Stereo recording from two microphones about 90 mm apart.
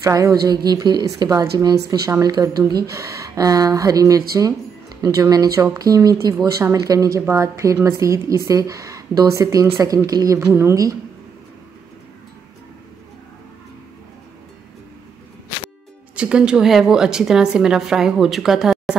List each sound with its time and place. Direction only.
0.0 s a woman's voice: 40° right (ahead or behind)
16.2 s a woman's voice: 10° right (ahead or behind)